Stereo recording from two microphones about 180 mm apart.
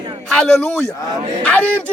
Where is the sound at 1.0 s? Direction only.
25° right (ahead or behind).